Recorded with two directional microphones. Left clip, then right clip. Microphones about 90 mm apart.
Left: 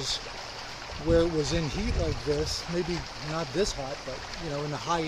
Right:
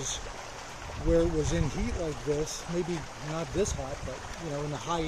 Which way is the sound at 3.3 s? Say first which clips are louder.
Left 2 dB; 40° left (ahead or behind).